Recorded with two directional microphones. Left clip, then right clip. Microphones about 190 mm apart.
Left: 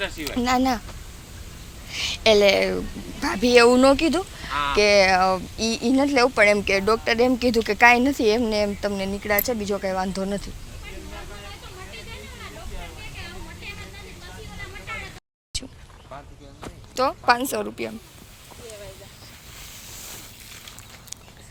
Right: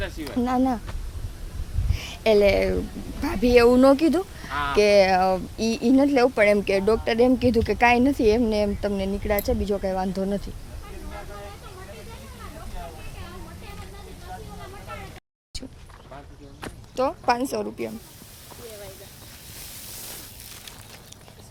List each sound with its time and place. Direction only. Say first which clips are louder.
0.0 s speech: left 2 dB; 20° left (ahead or behind)
0.4 s speech: left 3 dB; 20° right (ahead or behind)
1.9 s a woman's voice: left 3 dB; 25° right (ahead or behind); by 3.8 s 5° right (ahead or behind)
3.8 s speech: even; 25° right (ahead or behind)
15.5 s a sound: left 6 dB; 15° right (ahead or behind)
16.9 s a woman's voice: left 3 dB; 15° right (ahead or behind)